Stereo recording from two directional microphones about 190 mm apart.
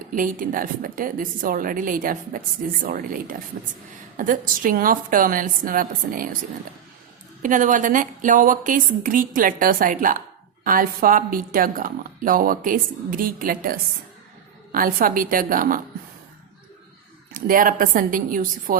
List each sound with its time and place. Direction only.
0.1 s a woman's voice: 45° right (ahead or behind)
7.4 s a woman's voice: 45° right (ahead or behind)
17.3 s a woman's voice: 45° right (ahead or behind)